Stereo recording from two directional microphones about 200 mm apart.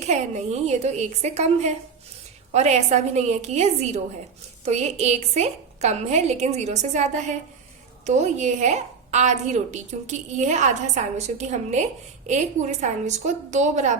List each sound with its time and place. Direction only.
0.0 s a woman's voice: 35° right (ahead or behind)